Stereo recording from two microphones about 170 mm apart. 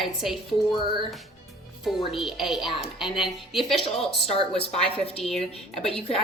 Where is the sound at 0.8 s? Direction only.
30° right (ahead or behind).